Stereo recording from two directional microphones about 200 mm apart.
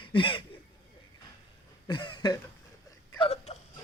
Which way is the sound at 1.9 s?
20° left (ahead or behind).